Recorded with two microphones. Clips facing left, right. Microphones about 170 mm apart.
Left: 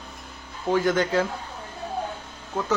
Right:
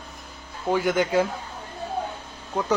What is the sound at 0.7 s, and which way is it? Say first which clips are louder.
Speech: even; 10° right (ahead or behind).